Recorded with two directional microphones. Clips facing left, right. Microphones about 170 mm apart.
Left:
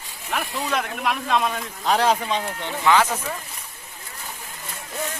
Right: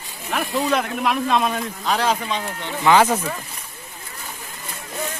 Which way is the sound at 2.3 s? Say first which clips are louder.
Left 1 dB; 5° left (ahead or behind).